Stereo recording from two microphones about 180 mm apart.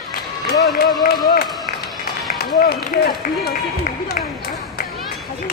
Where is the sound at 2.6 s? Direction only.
60° left (ahead or behind).